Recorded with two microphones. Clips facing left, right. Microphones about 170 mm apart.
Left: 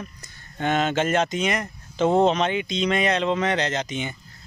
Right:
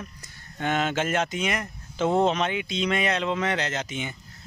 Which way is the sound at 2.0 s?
25° left (ahead or behind).